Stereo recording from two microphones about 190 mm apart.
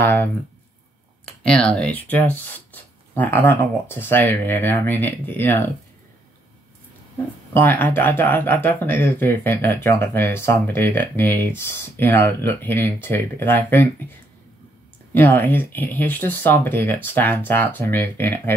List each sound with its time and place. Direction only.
0.0 s speech: 10° left (ahead or behind)
1.4 s speech: 5° left (ahead or behind)
7.5 s speech: 10° left (ahead or behind)
15.1 s speech: 10° left (ahead or behind)